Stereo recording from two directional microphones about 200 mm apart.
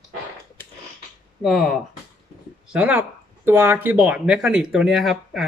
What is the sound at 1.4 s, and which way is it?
Speech, centre (ahead or behind).